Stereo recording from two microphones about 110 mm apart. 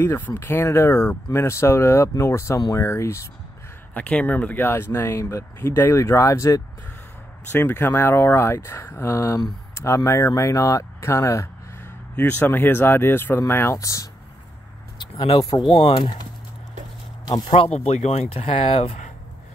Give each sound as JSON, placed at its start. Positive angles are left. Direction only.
{"t": 0.0, "sound": "speech", "side_deg": 20}
{"t": 3.9, "sound": "speech", "side_deg": 15}
{"t": 15.2, "sound": "speech", "side_deg": 55}
{"t": 17.7, "sound": "speech", "side_deg": 80}